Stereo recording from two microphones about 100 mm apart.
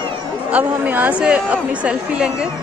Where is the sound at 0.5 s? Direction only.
15° right (ahead or behind).